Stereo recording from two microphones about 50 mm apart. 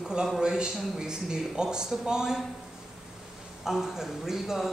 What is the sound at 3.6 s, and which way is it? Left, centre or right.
Speech, centre.